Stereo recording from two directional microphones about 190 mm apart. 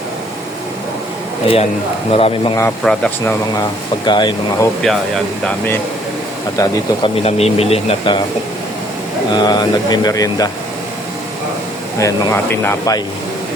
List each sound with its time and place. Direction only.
2.0 s speech: 30° left (ahead or behind)
2.8 s speech: 5° left (ahead or behind)
3.5 s speech: 20° left (ahead or behind)
4.8 s speech: centre (ahead or behind)
6.6 s speech: 30° left (ahead or behind)
9.3 s speech: 20° left (ahead or behind)
11.9 s speech: 15° left (ahead or behind)